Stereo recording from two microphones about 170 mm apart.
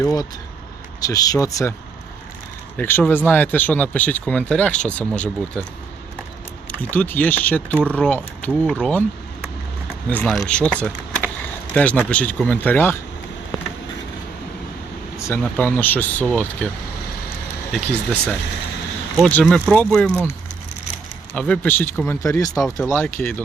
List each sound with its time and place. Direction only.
0.0 s speech: 15° left (ahead or behind)
2.7 s speech: 10° left (ahead or behind)
6.9 s speech: 10° left (ahead or behind)
10.1 s speech: 5° left (ahead or behind)
15.2 s speech: 10° left (ahead or behind)
17.7 s speech: 5° left (ahead or behind)
19.2 s speech: 5° left (ahead or behind)
21.3 s speech: 5° left (ahead or behind)